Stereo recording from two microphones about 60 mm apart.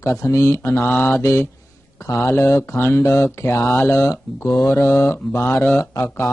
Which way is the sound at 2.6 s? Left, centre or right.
Left.